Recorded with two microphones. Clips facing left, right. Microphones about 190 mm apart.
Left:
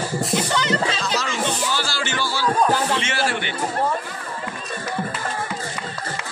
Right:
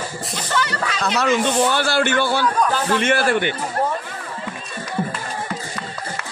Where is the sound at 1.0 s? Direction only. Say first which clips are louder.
Right 5 dB; 60° right (ahead or behind).